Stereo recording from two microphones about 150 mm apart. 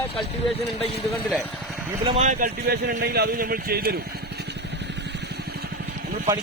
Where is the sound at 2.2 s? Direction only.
60° right (ahead or behind); by 4.0 s 90° right.